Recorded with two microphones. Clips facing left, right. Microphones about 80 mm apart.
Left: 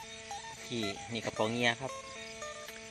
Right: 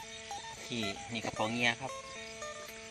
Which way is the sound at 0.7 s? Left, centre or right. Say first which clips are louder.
Left 2 dB; left.